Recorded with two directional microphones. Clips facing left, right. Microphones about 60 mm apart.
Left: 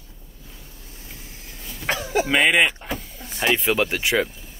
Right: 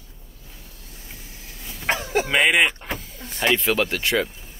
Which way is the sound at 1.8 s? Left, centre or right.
Right.